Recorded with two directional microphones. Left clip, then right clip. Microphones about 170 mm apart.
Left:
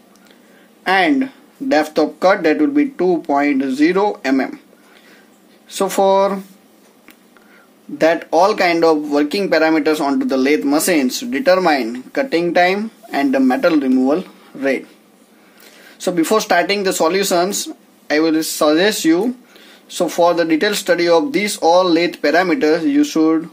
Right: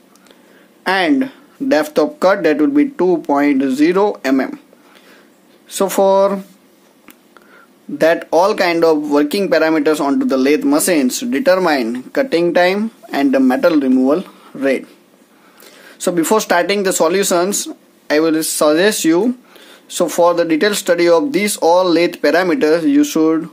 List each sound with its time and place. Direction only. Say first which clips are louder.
0.8 s speech: even; 30° right (ahead or behind)
5.7 s speech: right 1 dB; 30° right (ahead or behind)
8.0 s speech: right 1 dB; 30° right (ahead or behind)
15.8 s speech: right 1 dB; 30° right (ahead or behind)